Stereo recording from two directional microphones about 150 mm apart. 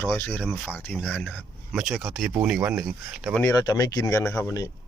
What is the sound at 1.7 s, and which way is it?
Speech, centre (ahead or behind).